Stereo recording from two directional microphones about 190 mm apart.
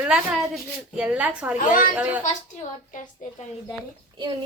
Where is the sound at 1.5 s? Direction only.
45° left (ahead or behind).